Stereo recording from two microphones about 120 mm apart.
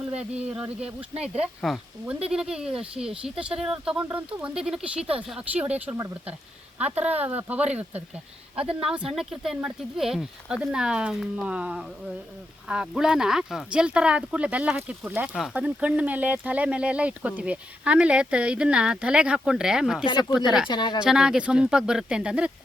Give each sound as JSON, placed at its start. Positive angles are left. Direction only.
{"t": 0.1, "sound": "speech", "side_deg": -10}
{"t": 20.1, "sound": "speech", "side_deg": 35}
{"t": 20.3, "sound": "speech", "side_deg": -5}
{"t": 20.7, "sound": "speech", "side_deg": 40}
{"t": 21.0, "sound": "speech", "side_deg": -5}